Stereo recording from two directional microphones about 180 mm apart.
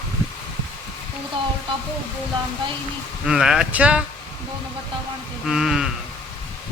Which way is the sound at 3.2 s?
5° right (ahead or behind).